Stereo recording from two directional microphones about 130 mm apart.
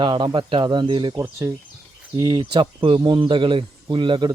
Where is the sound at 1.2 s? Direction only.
20° right (ahead or behind).